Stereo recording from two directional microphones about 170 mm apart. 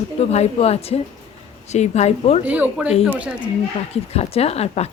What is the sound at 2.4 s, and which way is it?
Speech, 10° right (ahead or behind).